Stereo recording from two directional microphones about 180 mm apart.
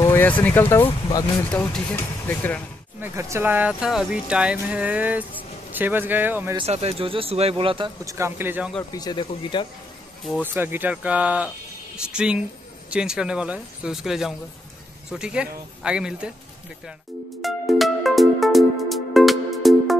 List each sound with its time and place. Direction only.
0.0 s speech: 10° left (ahead or behind)
3.0 s speech: 15° right (ahead or behind)
6.5 s speech: 35° right (ahead or behind)
8.0 s speech: 15° right (ahead or behind)
8.9 s speech: 25° left (ahead or behind)
10.4 s speech: 10° right (ahead or behind)
17.4 s music: centre (ahead or behind)